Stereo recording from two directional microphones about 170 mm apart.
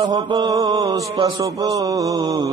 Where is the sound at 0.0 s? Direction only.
20° right (ahead or behind).